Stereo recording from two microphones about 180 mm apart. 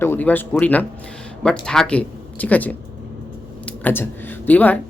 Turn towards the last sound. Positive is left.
turn(degrees=10)  # may be behind; listen again after turning